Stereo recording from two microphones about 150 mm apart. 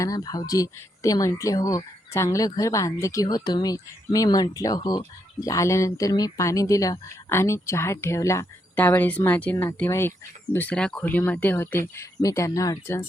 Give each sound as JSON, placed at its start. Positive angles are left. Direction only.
{"t": 0.0, "sound": "speech", "side_deg": 25}